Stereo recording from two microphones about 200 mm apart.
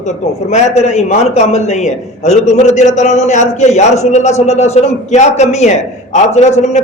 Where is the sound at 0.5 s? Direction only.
35° left (ahead or behind).